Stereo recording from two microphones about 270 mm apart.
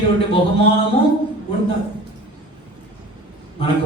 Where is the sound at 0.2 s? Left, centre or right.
Left.